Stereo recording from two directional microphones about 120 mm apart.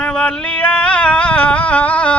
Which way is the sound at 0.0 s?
5° left (ahead or behind).